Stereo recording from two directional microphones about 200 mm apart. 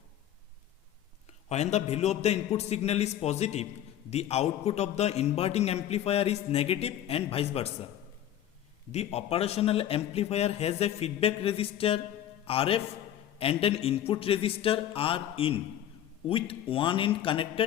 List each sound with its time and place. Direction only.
1.5 s a man's voice: 35° left (ahead or behind)
8.9 s a man's voice: 30° left (ahead or behind)